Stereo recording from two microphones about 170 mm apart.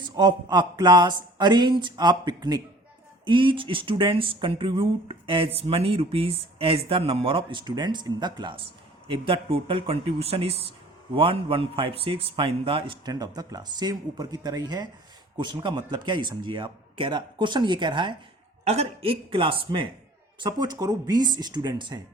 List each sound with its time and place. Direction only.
0.0 s a man's voice: 25° right (ahead or behind)
18.6 s a man's voice: 40° right (ahead or behind)